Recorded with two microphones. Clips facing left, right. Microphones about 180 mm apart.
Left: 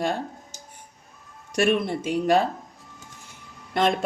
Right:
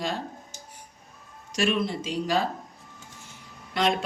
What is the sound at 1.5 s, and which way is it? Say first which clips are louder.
Speech: left 4 dB; 55° left (ahead or behind).